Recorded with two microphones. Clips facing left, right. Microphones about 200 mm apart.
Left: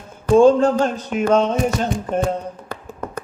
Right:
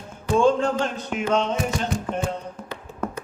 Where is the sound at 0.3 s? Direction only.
40° left (ahead or behind).